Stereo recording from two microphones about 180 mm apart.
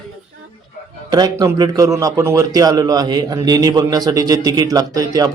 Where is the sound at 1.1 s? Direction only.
20° right (ahead or behind).